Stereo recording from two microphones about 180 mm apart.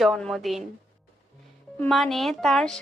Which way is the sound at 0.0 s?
Centre (ahead or behind).